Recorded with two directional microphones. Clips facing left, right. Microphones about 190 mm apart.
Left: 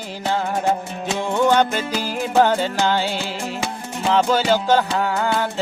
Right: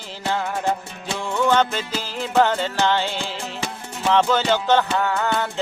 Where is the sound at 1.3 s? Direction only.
15° left (ahead or behind).